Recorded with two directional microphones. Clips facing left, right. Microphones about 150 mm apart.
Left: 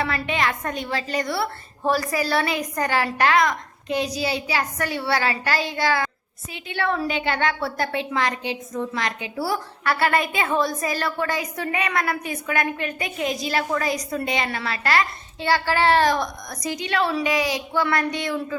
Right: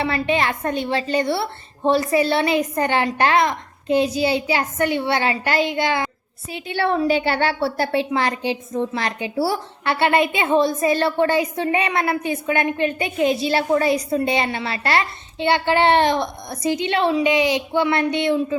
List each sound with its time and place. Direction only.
0.0 s a woman's voice: 30° right (ahead or behind)
6.5 s a woman's voice: 35° right (ahead or behind)